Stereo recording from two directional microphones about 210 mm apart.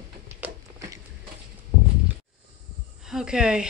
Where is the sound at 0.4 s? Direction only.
15° right (ahead or behind).